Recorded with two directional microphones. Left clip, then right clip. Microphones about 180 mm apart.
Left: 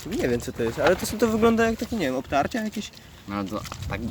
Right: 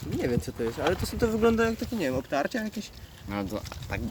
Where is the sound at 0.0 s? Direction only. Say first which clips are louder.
Left 4 dB; 50° left (ahead or behind); by 2.9 s 15° left (ahead or behind).